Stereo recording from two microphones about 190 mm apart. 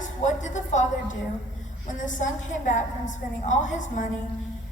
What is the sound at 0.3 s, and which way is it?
A woman's voice, 40° left (ahead or behind).